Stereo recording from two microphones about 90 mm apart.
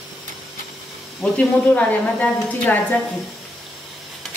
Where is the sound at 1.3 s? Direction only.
15° left (ahead or behind).